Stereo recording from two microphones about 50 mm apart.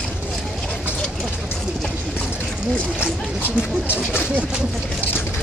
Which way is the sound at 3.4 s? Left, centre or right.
Left.